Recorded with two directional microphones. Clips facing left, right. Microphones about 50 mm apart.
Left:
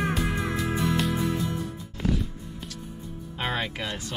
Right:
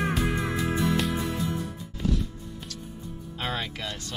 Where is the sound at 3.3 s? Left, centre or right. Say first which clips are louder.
Left 3 dB; centre.